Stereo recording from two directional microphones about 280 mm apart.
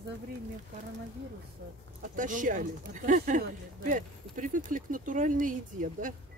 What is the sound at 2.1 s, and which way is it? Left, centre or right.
Speech, right.